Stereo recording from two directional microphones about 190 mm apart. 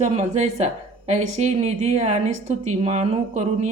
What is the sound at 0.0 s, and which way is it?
Speech, 35° right (ahead or behind).